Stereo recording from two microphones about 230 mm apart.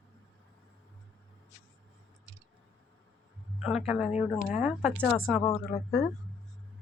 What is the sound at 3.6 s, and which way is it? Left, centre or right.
Speech, centre.